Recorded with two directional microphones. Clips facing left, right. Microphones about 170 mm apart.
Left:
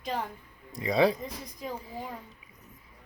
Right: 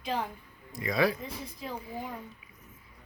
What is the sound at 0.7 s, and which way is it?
Speech, 30° left (ahead or behind).